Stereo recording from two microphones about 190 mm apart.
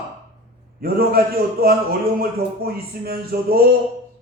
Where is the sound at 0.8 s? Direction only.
55° right (ahead or behind).